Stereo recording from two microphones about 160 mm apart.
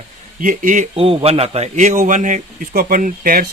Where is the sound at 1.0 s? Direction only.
40° right (ahead or behind).